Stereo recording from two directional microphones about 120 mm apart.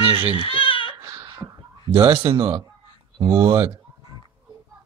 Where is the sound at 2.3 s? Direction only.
40° right (ahead or behind).